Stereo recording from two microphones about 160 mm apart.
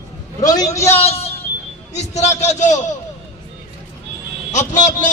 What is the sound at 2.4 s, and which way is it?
Speech, 45° left (ahead or behind).